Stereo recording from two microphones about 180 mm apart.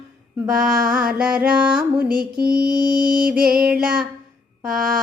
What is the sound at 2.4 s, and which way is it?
Music, 55° right (ahead or behind).